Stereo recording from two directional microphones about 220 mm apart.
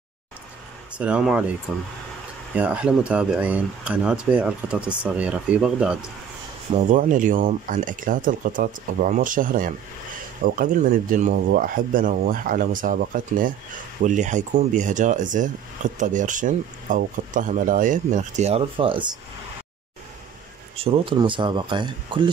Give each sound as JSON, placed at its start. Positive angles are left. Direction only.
{"t": 0.9, "sound": "speech", "side_deg": -5}
{"t": 6.7, "sound": "speech", "side_deg": -35}
{"t": 20.7, "sound": "speech", "side_deg": -25}